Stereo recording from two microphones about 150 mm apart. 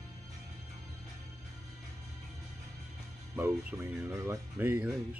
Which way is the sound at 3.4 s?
20° right (ahead or behind).